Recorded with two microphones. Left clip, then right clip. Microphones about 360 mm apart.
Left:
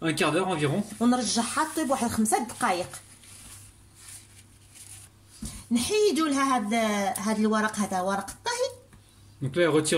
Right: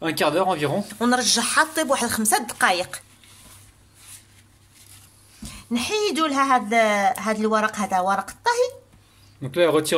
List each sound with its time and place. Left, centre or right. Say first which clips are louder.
0.0 s speech: right 5 dB; centre; by 2.7 s right
5.7 s speech: right 1 dB; right